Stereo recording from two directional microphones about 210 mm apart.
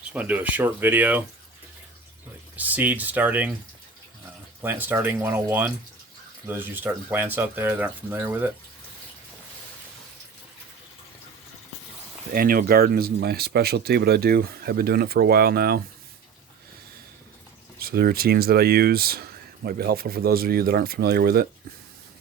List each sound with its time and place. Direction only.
0.1 s speech: 5° right (ahead or behind)
2.6 s speech: 5° right (ahead or behind)
4.6 s speech: 10° right (ahead or behind)
12.3 s speech: 45° right (ahead or behind)
17.7 s speech: 45° right (ahead or behind)